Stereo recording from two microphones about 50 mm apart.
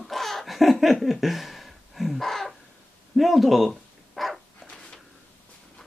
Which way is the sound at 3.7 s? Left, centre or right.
Centre.